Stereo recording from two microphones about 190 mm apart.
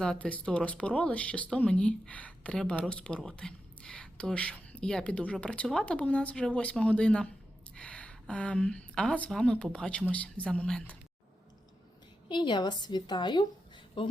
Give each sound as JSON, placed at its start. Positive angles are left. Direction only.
{"t": 0.0, "sound": "speech", "side_deg": 5}
{"t": 12.3, "sound": "a woman's voice", "side_deg": 25}